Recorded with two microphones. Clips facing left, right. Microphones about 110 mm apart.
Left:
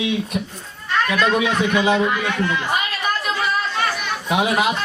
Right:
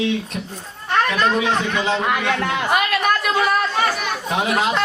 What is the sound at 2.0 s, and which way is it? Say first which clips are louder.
Speech: even; 60° right (ahead or behind).